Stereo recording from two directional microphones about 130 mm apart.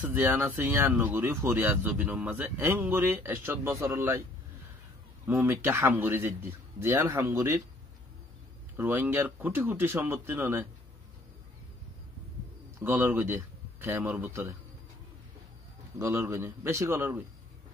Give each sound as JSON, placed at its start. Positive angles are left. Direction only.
{"t": 0.1, "sound": "speech", "side_deg": -15}
{"t": 5.2, "sound": "a man's voice", "side_deg": -15}
{"t": 8.7, "sound": "speech", "side_deg": -15}
{"t": 12.8, "sound": "speech", "side_deg": -15}
{"t": 16.0, "sound": "a man's voice", "side_deg": -20}